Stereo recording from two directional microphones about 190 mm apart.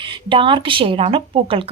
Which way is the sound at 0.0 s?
25° right (ahead or behind).